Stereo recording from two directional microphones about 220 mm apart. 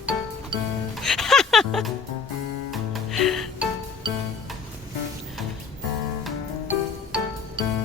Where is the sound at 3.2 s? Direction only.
Centre (ahead or behind).